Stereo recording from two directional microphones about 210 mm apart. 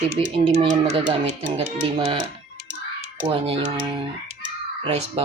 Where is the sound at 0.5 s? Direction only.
30° right (ahead or behind).